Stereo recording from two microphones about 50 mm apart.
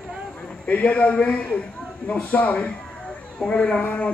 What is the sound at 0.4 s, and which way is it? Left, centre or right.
A man's voice, left.